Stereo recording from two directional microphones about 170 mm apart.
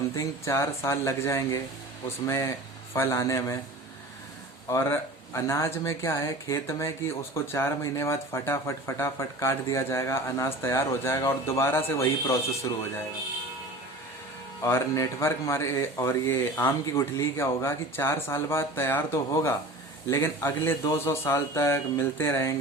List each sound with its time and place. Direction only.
0.2 s speech: 15° left (ahead or behind)
4.7 s speech: 15° left (ahead or behind)
14.6 s speech: 15° left (ahead or behind)